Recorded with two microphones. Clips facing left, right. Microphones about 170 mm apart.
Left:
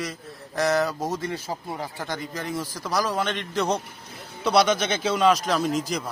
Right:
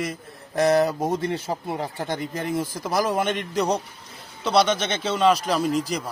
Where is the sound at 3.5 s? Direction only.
Centre (ahead or behind).